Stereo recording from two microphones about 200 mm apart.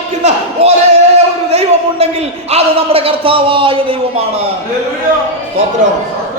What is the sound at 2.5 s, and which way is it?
A man's voice, 30° right (ahead or behind).